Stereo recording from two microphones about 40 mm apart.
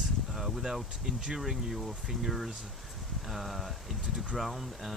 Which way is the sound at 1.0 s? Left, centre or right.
Centre.